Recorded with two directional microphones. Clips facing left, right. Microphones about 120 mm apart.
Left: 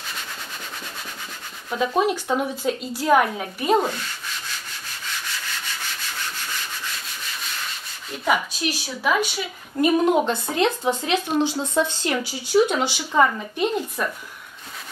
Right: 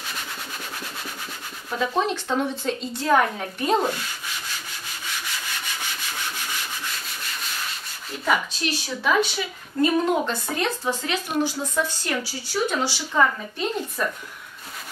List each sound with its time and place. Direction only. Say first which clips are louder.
1.8 s a woman's voice: left 3 dB; 10° left (ahead or behind)
8.3 s a woman's voice: left 1 dB; 10° left (ahead or behind)